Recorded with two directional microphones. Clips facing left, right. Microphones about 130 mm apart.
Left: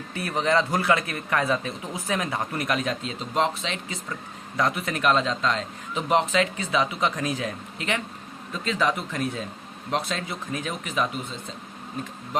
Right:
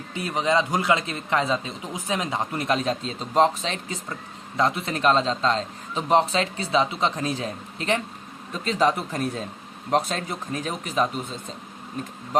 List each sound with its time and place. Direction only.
0.1 s a man's voice: 20° right (ahead or behind); by 4.0 s 40° right (ahead or behind)
4.5 s speech: 25° right (ahead or behind)